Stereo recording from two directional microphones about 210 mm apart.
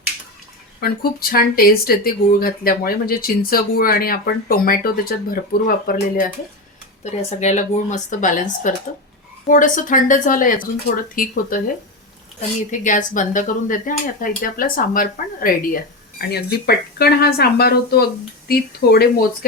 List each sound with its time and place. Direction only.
0.8 s speech: 45° left (ahead or behind)
7.0 s speech: 30° left (ahead or behind)
12.7 s speech: 40° left (ahead or behind)